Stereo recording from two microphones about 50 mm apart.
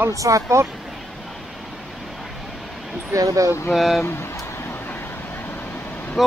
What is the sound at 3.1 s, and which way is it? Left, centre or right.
Speech, right.